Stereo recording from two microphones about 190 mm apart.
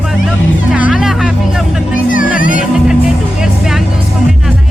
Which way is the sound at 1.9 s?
45° left (ahead or behind).